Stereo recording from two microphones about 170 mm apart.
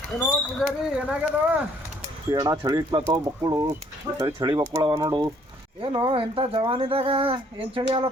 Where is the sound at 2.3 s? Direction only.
25° right (ahead or behind).